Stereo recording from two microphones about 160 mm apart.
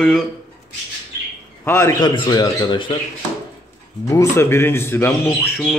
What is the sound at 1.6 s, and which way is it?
A man's voice, 15° left (ahead or behind).